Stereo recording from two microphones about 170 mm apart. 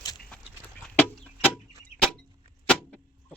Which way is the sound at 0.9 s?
5° left (ahead or behind).